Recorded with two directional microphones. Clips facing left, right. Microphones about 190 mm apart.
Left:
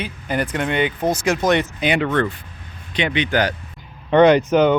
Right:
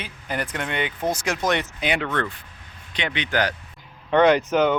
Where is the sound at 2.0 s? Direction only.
25° left (ahead or behind).